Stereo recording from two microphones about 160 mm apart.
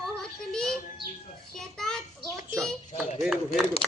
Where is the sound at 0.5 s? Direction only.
5° left (ahead or behind).